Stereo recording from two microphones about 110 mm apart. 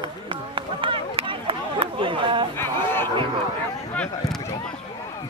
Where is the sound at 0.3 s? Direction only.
50° right (ahead or behind).